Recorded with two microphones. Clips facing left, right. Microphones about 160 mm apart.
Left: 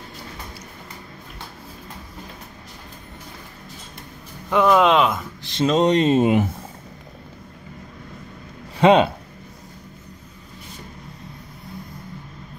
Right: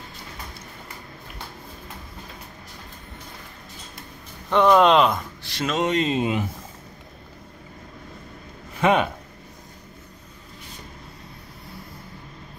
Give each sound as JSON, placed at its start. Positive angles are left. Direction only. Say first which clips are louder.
{"t": 4.5, "sound": "speech", "louder": "even", "side_deg": 5}
{"t": 5.4, "sound": "speech", "louder": "left 8 dB", "side_deg": 30}
{"t": 8.8, "sound": "speech", "louder": "left 6 dB", "side_deg": 30}